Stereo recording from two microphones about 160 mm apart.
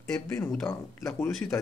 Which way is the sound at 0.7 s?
20° left (ahead or behind).